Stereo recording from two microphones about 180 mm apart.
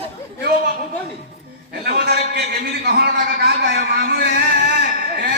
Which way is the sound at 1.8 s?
65° right (ahead or behind).